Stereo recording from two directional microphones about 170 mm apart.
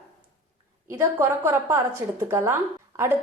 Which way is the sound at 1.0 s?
15° right (ahead or behind).